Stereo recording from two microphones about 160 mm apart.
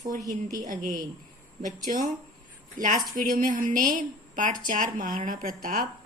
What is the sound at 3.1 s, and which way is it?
A woman's voice, 60° right (ahead or behind).